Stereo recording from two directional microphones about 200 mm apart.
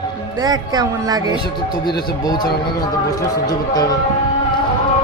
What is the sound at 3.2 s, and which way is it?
Speech, 15° left (ahead or behind).